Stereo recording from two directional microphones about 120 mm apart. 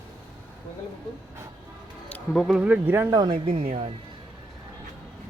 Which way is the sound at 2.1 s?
15° left (ahead or behind).